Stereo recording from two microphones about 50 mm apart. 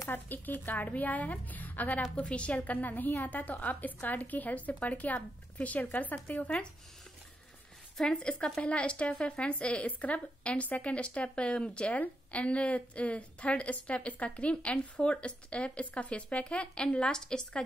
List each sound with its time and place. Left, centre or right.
0.1 s speech: left
8.0 s a woman's voice: centre